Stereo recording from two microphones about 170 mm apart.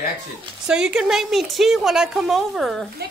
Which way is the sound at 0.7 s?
5° right (ahead or behind).